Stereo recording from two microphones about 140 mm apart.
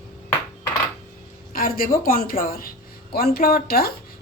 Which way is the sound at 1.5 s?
90° left.